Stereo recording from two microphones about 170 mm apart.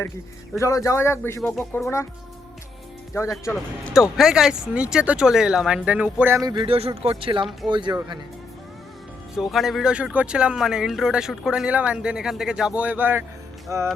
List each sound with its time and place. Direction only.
0.5 s speech: 20° left (ahead or behind)
3.2 s speech: 15° left (ahead or behind)
3.5 s speech: centre (ahead or behind); by 8.2 s 25° right (ahead or behind)
9.3 s speech: centre (ahead or behind); by 13.8 s 15° right (ahead or behind)